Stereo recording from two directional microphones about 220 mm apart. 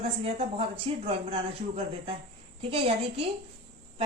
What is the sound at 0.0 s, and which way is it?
A woman's voice, 25° right (ahead or behind).